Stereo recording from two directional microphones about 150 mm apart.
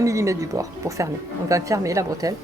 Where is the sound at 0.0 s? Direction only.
20° right (ahead or behind).